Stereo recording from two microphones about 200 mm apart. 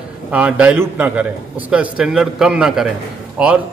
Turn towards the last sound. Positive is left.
turn(degrees=-5)  # may be behind; listen again after turning